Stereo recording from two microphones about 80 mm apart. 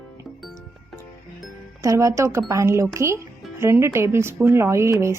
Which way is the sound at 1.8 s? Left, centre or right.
Right.